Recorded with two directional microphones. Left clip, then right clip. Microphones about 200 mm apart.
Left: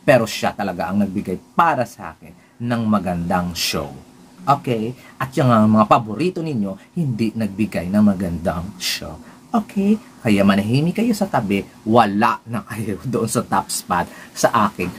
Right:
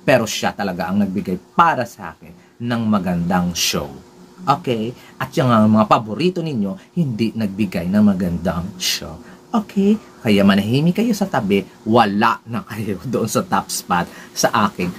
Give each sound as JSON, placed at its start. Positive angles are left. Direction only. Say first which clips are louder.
{"t": 0.0, "sound": "speech", "louder": "left 1 dB", "side_deg": 5}